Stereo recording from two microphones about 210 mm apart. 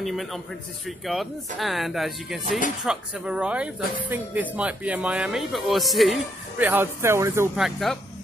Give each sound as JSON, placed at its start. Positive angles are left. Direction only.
{"t": 0.0, "sound": "speech", "side_deg": 0}
{"t": 7.5, "sound": "speech", "side_deg": 0}